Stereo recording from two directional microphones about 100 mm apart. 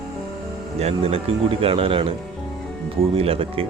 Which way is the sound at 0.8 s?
85° right.